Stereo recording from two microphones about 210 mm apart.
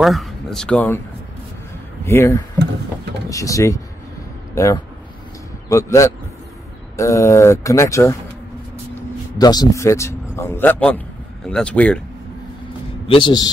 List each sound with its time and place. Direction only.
0.0 s speech: centre (ahead or behind)
2.0 s speech: 15° left (ahead or behind)
9.4 s speech: 20° left (ahead or behind)
13.1 s a man's voice: 20° left (ahead or behind)